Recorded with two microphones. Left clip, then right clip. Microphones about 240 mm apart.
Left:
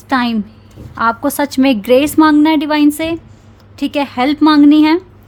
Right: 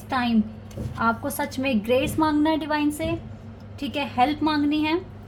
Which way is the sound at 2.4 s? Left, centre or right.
Left.